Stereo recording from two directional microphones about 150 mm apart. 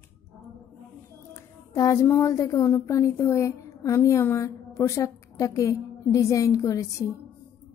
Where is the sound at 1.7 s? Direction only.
20° left (ahead or behind).